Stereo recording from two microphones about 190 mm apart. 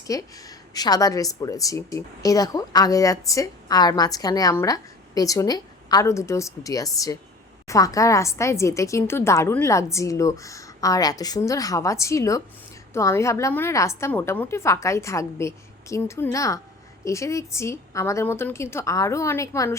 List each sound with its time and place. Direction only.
0.1 s a woman's voice: 20° left (ahead or behind)